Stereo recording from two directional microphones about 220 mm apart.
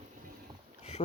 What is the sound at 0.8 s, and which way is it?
Boat, 30° left (ahead or behind).